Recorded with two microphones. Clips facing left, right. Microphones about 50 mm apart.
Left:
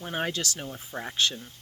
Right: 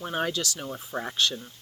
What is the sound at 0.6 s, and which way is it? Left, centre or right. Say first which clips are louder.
Speech: right 3 dB; centre.